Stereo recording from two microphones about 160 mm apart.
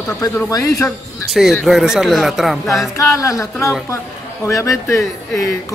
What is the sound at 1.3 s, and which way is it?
Speech, centre (ahead or behind).